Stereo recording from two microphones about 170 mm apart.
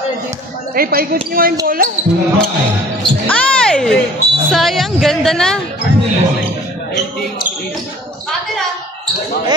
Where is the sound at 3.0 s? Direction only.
5° left (ahead or behind).